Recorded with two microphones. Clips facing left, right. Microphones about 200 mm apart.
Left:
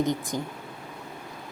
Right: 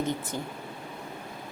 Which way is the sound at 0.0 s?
15° left (ahead or behind).